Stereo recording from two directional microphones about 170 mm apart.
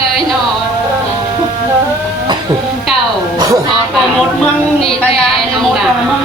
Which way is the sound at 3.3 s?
20° right (ahead or behind).